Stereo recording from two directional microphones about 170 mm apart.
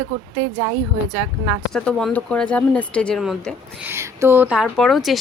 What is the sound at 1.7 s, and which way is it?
Speech, 5° left (ahead or behind).